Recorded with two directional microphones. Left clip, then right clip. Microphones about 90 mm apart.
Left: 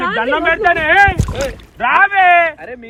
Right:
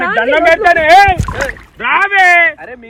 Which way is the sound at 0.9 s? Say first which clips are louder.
Right 4 dB; 90° right.